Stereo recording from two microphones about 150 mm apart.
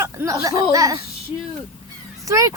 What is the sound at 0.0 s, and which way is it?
Speech, 20° right (ahead or behind).